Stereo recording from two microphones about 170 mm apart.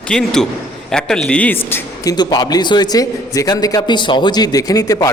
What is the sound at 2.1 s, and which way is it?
A man's voice, 25° left (ahead or behind).